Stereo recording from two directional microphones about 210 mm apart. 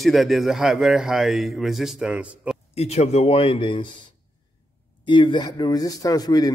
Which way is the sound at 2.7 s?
30° left (ahead or behind).